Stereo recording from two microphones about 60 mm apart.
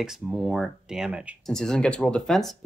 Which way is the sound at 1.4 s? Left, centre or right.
Centre.